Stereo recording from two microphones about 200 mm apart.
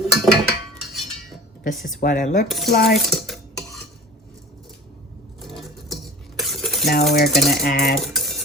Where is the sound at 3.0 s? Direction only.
Centre (ahead or behind).